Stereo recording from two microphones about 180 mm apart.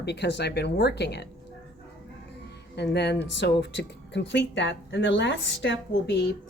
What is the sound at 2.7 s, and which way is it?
Speech, 70° left (ahead or behind).